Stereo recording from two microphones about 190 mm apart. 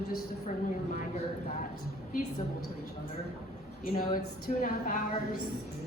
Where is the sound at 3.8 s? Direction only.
50° left (ahead or behind).